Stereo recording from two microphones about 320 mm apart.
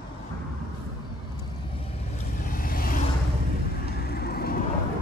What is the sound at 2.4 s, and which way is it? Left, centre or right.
Vehicle, left.